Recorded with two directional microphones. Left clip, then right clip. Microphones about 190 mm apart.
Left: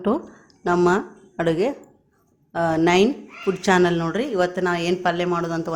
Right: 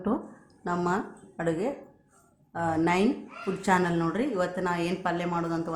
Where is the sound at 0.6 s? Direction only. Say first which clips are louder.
Left 10 dB; 45° left (ahead or behind).